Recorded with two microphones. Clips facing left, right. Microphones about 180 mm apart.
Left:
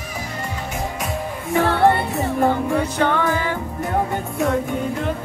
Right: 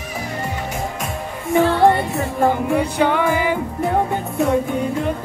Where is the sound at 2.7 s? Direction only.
15° right (ahead or behind).